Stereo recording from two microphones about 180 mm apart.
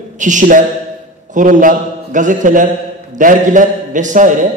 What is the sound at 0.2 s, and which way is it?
A man's voice, 45° right (ahead or behind).